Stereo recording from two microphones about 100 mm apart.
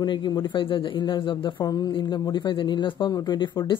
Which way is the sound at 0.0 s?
50° left (ahead or behind).